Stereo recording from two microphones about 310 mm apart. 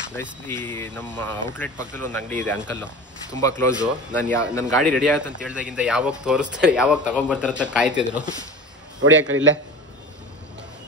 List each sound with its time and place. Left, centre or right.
0.5 s speech: centre
4.9 s speech: centre
9.0 s a man's voice: right